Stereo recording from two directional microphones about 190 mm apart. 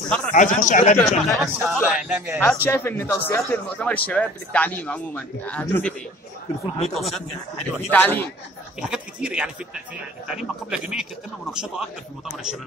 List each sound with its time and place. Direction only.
0.3 s a man's voice: 40° left (ahead or behind)
1.0 s a man's voice: centre (ahead or behind)
2.4 s a man's voice: 10° left (ahead or behind)
7.9 s a man's voice: 10° left (ahead or behind)
8.8 s a man's voice: 5° right (ahead or behind)